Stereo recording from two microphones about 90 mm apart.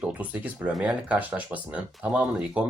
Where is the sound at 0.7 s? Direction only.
5° right (ahead or behind).